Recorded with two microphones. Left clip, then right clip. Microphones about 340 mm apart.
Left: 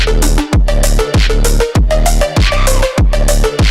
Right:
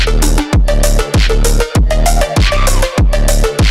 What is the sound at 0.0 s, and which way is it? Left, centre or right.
Music, centre.